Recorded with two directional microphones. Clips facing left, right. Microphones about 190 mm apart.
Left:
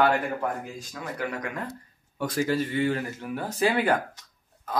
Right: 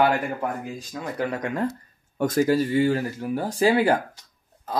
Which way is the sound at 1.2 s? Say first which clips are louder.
Right 7 dB; 30° right (ahead or behind).